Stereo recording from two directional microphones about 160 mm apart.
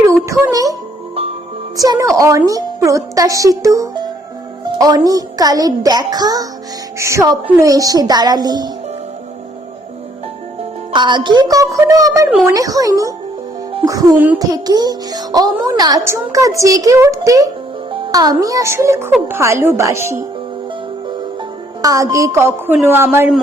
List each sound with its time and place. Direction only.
0.1 s music: 15° right (ahead or behind)
1.7 s a child's voice: 20° right (ahead or behind)
10.9 s a child's voice: 30° right (ahead or behind)
21.8 s a woman's voice: 20° right (ahead or behind)